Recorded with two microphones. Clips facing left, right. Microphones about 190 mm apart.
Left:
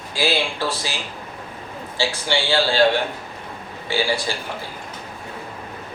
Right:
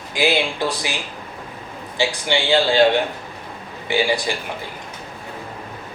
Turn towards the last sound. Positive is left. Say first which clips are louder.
# right 2 dB
turn(degrees=-15)  # may be behind; listen again after turning